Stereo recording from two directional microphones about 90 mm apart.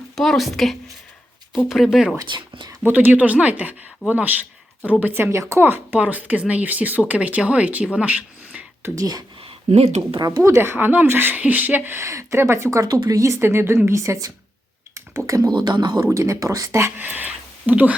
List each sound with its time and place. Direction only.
0.2 s speech: centre (ahead or behind)
2.2 s speech: 60° right (ahead or behind)
2.8 s speech: 20° right (ahead or behind)
9.0 s speech: 45° right (ahead or behind)
9.4 s speech: 90° right
10.2 s speech: 45° right (ahead or behind)
10.4 s speech: 30° right (ahead or behind); by 16.0 s 50° right (ahead or behind)
16.0 s speech: 35° right (ahead or behind)
16.8 s a sound: 20° right (ahead or behind)